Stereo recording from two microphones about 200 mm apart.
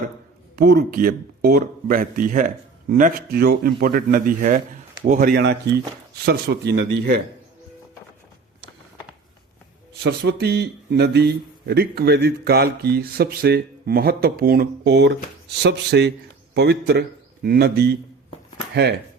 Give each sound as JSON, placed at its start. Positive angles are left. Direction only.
{"t": 0.5, "sound": "speech", "side_deg": -50}
{"t": 10.0, "sound": "speech", "side_deg": -55}